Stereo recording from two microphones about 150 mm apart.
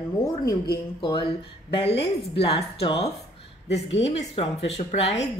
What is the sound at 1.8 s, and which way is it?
A woman's voice, 35° left (ahead or behind).